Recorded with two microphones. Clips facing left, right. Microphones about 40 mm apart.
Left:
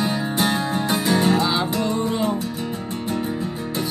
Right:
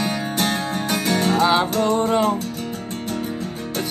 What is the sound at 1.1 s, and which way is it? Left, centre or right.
Music, right.